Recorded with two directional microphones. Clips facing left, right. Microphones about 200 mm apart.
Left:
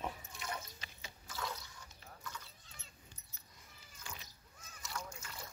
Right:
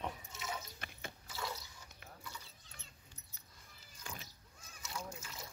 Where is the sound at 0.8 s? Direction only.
55° right (ahead or behind).